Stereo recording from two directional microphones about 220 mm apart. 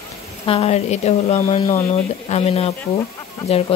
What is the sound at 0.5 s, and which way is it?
Speech, 30° left (ahead or behind).